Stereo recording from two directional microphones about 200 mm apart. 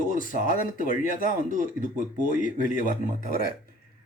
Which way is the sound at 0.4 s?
40° left (ahead or behind).